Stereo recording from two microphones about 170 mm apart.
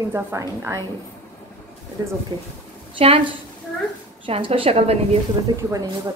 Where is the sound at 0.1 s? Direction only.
15° right (ahead or behind).